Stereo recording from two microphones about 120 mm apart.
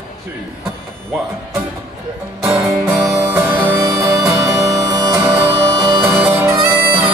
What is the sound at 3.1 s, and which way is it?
Music, 25° right (ahead or behind).